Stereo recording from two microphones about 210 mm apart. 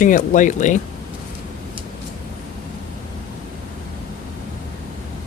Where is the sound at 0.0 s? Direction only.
40° left (ahead or behind).